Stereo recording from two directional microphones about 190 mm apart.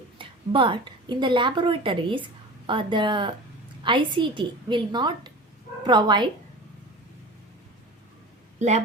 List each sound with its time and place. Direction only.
0.2 s a woman's voice: 25° right (ahead or behind)
8.5 s speech: 35° right (ahead or behind)